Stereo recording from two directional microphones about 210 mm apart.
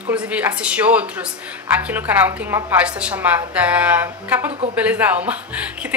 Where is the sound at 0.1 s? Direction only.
5° right (ahead or behind).